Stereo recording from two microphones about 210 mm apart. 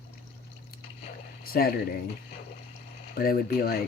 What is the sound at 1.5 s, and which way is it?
Speech, 45° left (ahead or behind).